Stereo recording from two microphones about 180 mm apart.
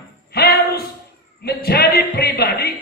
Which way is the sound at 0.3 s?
60° left (ahead or behind).